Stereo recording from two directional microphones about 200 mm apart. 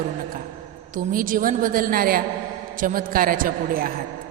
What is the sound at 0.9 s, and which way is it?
A woman's voice, 45° right (ahead or behind).